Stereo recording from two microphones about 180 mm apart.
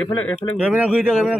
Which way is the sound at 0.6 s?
5° right (ahead or behind).